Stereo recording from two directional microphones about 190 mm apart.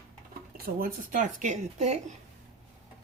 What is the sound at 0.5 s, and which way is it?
Speech, 50° right (ahead or behind).